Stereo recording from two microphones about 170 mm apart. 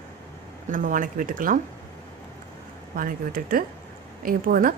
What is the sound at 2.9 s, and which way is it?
Speech, 55° right (ahead or behind).